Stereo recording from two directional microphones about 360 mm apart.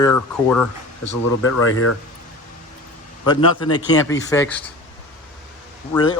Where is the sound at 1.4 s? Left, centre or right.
Left.